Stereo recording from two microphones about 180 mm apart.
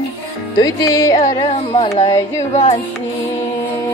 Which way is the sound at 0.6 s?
20° left (ahead or behind).